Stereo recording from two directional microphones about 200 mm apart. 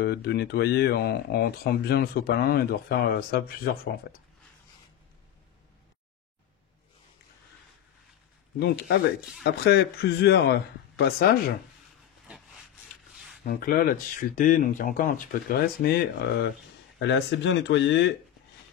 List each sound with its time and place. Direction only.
0.0 s speech: 55° left (ahead or behind)
8.5 s speech: 55° left (ahead or behind)
13.5 s speech: 45° left (ahead or behind)
17.0 s speech: 65° left (ahead or behind)